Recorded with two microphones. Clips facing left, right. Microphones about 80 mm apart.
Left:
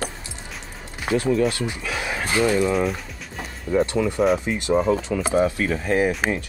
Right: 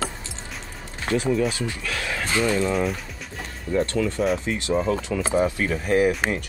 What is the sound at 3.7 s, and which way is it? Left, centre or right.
Speech, centre.